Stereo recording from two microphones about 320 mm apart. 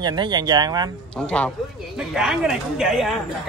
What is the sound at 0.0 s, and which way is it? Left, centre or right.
Speech, centre.